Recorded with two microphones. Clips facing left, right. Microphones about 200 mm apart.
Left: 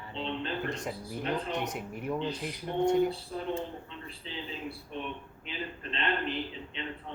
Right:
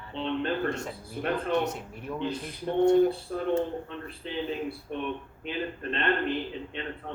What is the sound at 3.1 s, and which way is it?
A man's voice, 55° right (ahead or behind).